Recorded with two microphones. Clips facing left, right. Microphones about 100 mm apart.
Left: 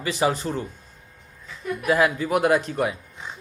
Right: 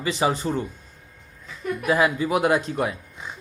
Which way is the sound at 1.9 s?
Centre (ahead or behind).